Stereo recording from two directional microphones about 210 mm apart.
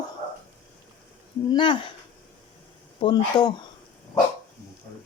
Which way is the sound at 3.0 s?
20° left (ahead or behind).